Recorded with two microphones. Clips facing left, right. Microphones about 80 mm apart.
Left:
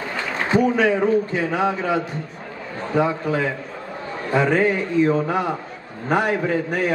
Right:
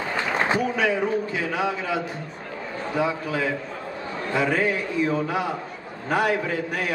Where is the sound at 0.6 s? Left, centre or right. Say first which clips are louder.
Left 5 dB; left.